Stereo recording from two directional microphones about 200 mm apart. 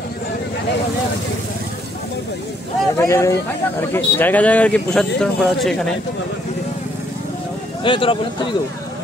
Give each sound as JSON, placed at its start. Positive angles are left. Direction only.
{"t": 3.0, "sound": "speech", "side_deg": 15}
{"t": 7.8, "sound": "speech", "side_deg": 25}